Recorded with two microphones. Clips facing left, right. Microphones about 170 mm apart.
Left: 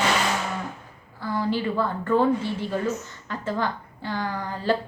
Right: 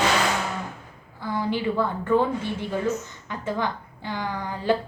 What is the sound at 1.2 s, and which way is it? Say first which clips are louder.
A woman's voice: even; 15° right (ahead or behind).